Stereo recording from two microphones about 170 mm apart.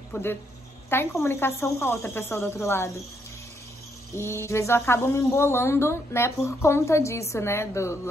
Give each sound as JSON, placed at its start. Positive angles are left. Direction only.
{"t": 0.1, "sound": "speech", "side_deg": 15}
{"t": 4.1, "sound": "speech", "side_deg": 15}